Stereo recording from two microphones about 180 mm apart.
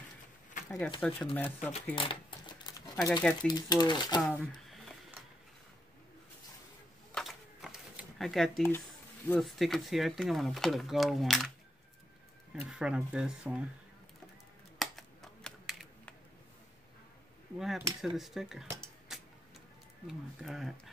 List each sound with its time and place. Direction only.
0.7 s speech: 5° left (ahead or behind)
2.0 s a sound: 25° left (ahead or behind)
3.4 s speech: 20° left (ahead or behind)
4.2 s a sound: centre (ahead or behind)
7.2 s a sound: centre (ahead or behind)
9.3 s speech: centre (ahead or behind)
12.5 s speech: 5° right (ahead or behind)
14.8 s computer keyboard: centre (ahead or behind)
17.6 s speech: centre (ahead or behind)
19.1 s music: 5° right (ahead or behind)
20.1 s speech: centre (ahead or behind)